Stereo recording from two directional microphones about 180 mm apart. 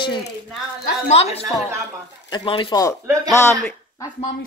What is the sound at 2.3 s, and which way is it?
Speech, 30° left (ahead or behind).